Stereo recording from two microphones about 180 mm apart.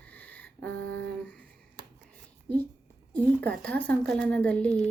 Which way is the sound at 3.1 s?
5° left (ahead or behind).